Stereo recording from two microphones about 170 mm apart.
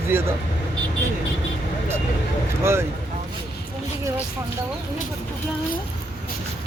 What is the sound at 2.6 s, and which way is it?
Speech, 15° right (ahead or behind).